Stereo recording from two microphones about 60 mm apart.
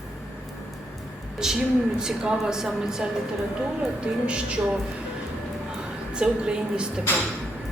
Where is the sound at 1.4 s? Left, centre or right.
Centre.